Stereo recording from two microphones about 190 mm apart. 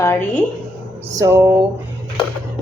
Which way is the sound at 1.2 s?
15° right (ahead or behind).